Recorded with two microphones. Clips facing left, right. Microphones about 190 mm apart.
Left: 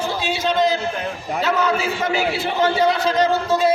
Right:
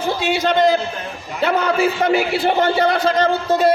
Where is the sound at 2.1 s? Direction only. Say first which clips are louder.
Right 5 dB; 55° right (ahead or behind).